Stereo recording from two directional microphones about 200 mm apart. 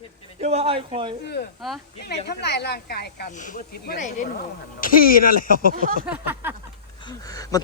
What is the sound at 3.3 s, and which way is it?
Speech, 40° left (ahead or behind).